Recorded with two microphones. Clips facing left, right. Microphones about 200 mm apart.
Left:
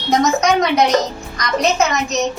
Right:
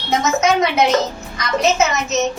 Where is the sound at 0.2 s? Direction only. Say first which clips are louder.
Even; 5° right (ahead or behind).